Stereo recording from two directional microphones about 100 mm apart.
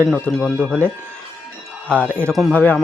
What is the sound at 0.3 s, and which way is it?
Speech, centre (ahead or behind).